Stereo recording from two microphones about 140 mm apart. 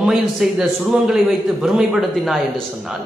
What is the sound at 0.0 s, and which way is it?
A man's voice, 5° right (ahead or behind).